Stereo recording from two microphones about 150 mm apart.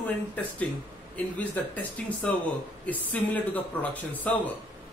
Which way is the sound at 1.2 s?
10° left (ahead or behind).